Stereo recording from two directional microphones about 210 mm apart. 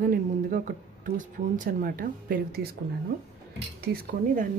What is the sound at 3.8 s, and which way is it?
Speech, 45° right (ahead or behind).